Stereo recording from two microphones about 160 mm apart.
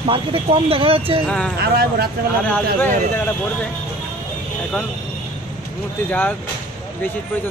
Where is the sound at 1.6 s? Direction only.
75° right (ahead or behind).